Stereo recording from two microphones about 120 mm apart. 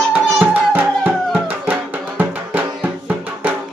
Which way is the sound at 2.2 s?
15° right (ahead or behind).